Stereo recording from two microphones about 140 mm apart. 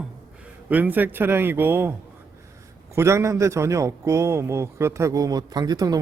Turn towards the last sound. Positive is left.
turn(degrees=-30)  # may be behind; listen again after turning